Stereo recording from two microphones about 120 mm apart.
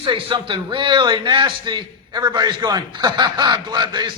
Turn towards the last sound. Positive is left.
turn(degrees=-35)  # may be behind; listen again after turning